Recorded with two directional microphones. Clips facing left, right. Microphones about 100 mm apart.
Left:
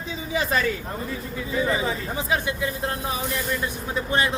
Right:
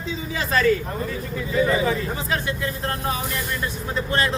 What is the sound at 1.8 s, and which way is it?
Speech, 15° left (ahead or behind).